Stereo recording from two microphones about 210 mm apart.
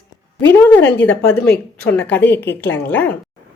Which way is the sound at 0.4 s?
10° left (ahead or behind).